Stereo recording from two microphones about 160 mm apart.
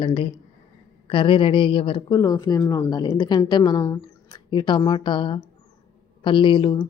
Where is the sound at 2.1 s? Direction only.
20° left (ahead or behind).